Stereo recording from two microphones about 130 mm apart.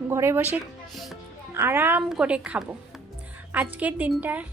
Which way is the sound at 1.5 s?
20° right (ahead or behind).